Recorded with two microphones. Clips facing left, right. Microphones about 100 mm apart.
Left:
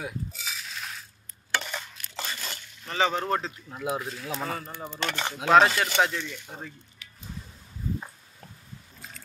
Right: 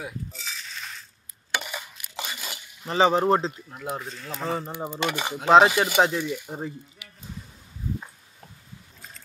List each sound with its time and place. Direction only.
0.0 s coin: 5° left (ahead or behind)
1.5 s stir: 10° right (ahead or behind)
2.9 s speech: 30° right (ahead or behind)
3.7 s speech: centre (ahead or behind)
4.6 s speech: 20° right (ahead or behind)